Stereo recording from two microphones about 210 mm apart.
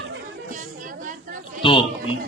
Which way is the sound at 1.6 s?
25° left (ahead or behind).